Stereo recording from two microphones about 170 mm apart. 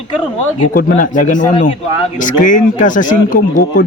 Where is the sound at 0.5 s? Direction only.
50° left (ahead or behind).